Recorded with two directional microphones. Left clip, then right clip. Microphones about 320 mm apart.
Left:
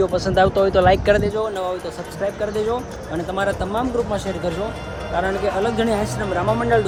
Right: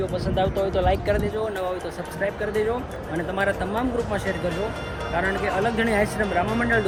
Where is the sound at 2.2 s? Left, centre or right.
Centre.